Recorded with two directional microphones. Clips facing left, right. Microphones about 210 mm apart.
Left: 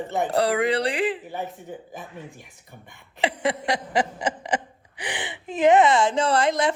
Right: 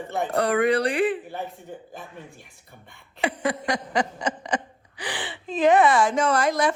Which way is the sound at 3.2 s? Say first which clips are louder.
Left 1 dB; 25° left (ahead or behind).